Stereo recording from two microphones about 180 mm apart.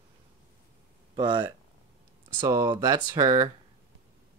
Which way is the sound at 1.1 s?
25° right (ahead or behind).